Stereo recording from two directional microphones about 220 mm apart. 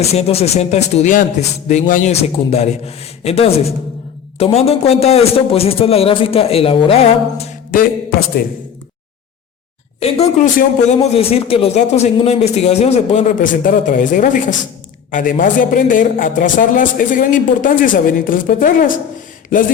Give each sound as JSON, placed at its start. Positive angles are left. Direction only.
{"t": 0.0, "sound": "speech", "side_deg": 30}
{"t": 10.0, "sound": "a man's voice", "side_deg": 30}